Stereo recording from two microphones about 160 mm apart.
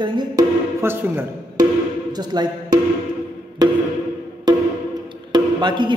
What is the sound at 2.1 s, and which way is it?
A man's voice, 25° right (ahead or behind).